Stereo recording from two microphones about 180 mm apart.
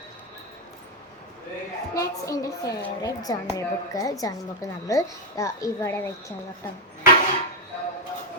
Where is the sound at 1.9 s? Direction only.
20° left (ahead or behind).